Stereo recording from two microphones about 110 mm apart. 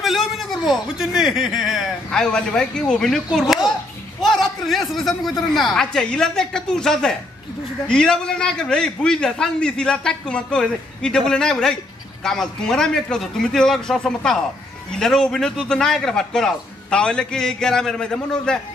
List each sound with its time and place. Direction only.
0.0 s a man's voice: centre (ahead or behind)